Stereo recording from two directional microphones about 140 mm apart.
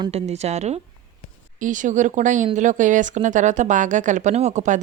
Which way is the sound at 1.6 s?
65° right (ahead or behind).